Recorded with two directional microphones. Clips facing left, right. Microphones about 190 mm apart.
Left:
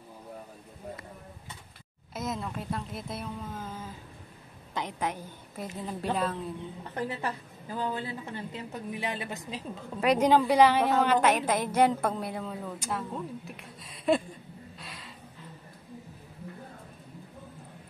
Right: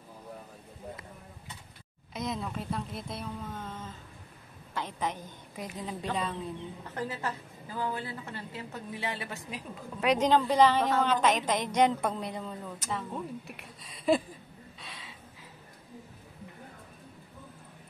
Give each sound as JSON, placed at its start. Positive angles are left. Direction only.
{"t": 2.1, "sound": "a woman's voice", "side_deg": 0}
{"t": 7.0, "sound": "a woman's voice", "side_deg": 20}
{"t": 14.8, "sound": "a sound", "side_deg": 0}